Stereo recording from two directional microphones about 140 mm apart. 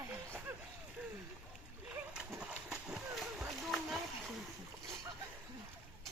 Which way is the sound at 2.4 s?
5° right (ahead or behind).